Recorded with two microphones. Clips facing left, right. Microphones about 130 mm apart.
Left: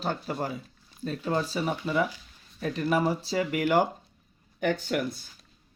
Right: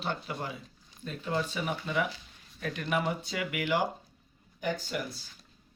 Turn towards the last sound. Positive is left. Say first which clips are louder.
# left 6 dB
turn(degrees=60)  # may be behind; listen again after turning